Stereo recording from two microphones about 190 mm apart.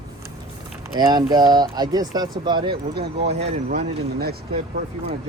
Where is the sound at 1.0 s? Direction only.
20° right (ahead or behind).